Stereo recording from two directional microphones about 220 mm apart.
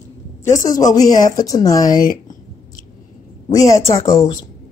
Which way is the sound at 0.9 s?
15° left (ahead or behind).